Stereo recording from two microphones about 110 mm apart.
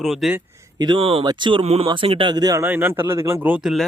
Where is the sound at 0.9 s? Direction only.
60° right (ahead or behind).